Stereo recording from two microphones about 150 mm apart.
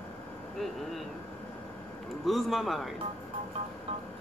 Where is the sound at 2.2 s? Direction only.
Centre (ahead or behind).